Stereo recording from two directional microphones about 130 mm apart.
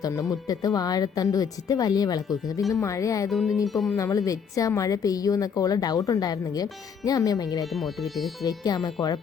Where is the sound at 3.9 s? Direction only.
25° left (ahead or behind).